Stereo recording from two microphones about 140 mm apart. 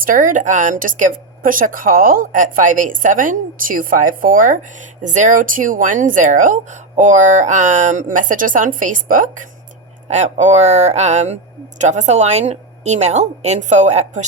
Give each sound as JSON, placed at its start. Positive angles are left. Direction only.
{"t": 0.0, "sound": "a woman's voice", "side_deg": -70}
{"t": 5.0, "sound": "a woman's voice", "side_deg": -65}
{"t": 10.1, "sound": "a woman's voice", "side_deg": -55}